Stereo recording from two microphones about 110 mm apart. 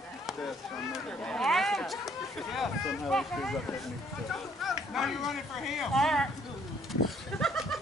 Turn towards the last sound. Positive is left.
turn(degrees=5)  # may be behind; listen again after turning